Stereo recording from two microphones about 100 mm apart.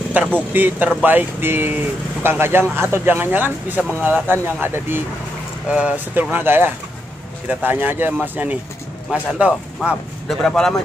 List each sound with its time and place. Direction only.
0.2 s speech: 15° right (ahead or behind)
10.2 s speech: 5° left (ahead or behind)